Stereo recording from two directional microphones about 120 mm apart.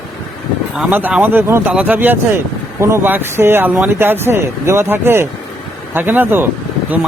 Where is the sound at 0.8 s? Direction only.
15° right (ahead or behind).